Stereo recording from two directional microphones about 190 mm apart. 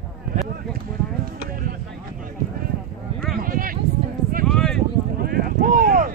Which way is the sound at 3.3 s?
50° right (ahead or behind).